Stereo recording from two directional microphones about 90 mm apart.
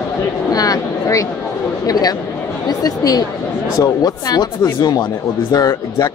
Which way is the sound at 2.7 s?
45° left (ahead or behind).